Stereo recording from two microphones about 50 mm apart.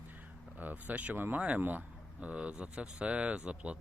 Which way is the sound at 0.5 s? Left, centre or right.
Right.